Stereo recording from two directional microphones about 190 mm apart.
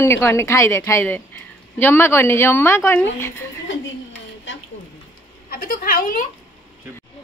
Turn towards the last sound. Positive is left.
turn(degrees=45)  # may be behind; listen again after turning